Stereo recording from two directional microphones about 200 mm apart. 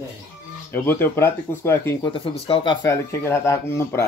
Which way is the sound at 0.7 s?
10° left (ahead or behind).